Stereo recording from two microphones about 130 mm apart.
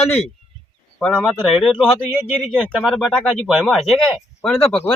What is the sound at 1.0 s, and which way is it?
Speech, 5° left (ahead or behind).